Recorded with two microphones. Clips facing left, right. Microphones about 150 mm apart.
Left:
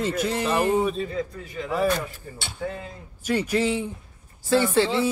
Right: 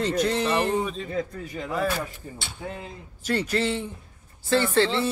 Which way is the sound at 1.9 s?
5° right (ahead or behind).